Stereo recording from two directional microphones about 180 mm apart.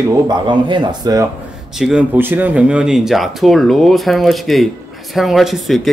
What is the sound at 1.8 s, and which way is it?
Speech, 5° right (ahead or behind).